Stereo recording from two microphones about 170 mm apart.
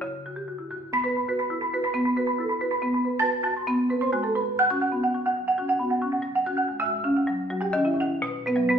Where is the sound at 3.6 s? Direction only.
5° right (ahead or behind).